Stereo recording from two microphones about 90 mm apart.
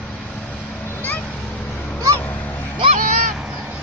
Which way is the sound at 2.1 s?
20° left (ahead or behind).